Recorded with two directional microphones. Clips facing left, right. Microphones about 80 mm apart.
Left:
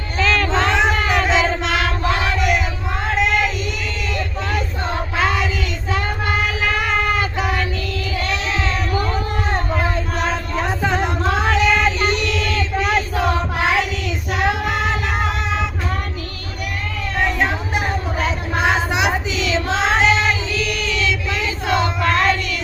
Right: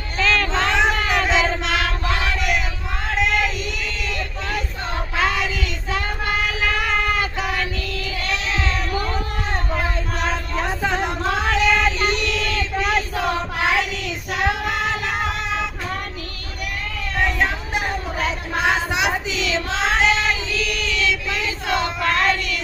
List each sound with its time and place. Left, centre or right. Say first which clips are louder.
0.2 s child singing: left 2 dB; centre
4.1 s a sound: left 5 dB; left
5.9 s child singing: left 2 dB; left
8.6 s a sound: left 3 dB; left
10.3 s music: left 2 dB; left
11.3 s child singing: left 2 dB; left
14.3 s music: left 2 dB; left
17.2 s a sound: left 1 dB; left
19.3 s child singing: left 3 dB; centre